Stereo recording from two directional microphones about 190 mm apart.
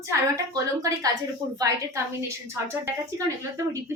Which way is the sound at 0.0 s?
15° right (ahead or behind).